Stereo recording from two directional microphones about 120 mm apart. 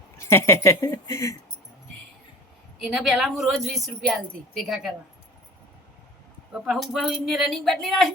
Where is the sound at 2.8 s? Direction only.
Centre (ahead or behind).